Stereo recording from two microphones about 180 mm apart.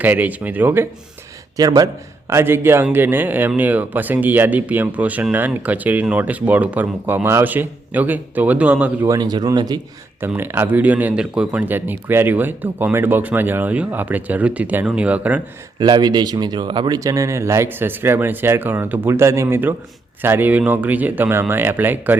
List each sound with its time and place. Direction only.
0.0 s speech: 10° right (ahead or behind)
9.0 s speech: 20° right (ahead or behind)
15.8 s speech: 25° right (ahead or behind)